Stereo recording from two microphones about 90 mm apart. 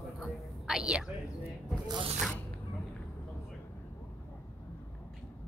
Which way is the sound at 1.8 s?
65° right (ahead or behind).